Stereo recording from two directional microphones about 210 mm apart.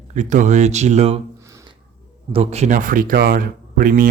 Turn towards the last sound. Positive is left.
turn(degrees=-40)  # may be behind; listen again after turning